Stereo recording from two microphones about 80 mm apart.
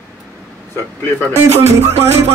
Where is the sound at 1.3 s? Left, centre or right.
Right.